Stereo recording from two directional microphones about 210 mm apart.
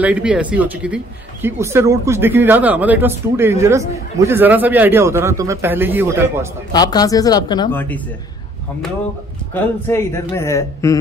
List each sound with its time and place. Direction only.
0.0 s speech: 5° right (ahead or behind)
6.7 s speech: 20° left (ahead or behind)
7.7 s a man's voice: 10° left (ahead or behind)
9.5 s a man's voice: 10° left (ahead or behind)